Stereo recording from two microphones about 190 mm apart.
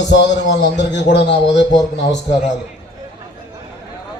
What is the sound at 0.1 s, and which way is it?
Music, 65° left (ahead or behind).